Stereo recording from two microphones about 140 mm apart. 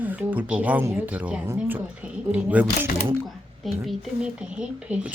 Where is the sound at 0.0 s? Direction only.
10° right (ahead or behind).